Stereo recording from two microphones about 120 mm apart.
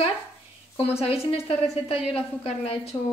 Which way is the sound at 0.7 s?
55° left (ahead or behind).